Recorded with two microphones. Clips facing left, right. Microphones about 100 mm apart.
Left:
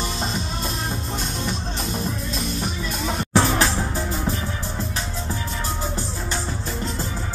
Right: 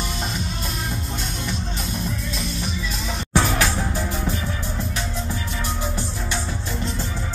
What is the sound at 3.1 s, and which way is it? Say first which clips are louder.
Music: left 2 dB; 35° left (ahead or behind).